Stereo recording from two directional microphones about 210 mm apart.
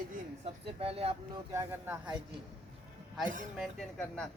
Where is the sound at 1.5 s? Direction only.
10° right (ahead or behind).